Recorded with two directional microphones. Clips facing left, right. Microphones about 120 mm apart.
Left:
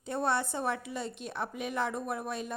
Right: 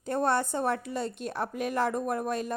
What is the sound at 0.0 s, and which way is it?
A woman's voice, 45° right (ahead or behind).